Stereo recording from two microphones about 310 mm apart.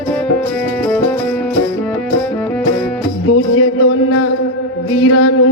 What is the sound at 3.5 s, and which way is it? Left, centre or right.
Music, left.